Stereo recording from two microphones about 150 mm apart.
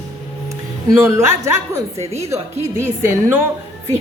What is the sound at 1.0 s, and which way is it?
A woman's voice, 15° right (ahead or behind).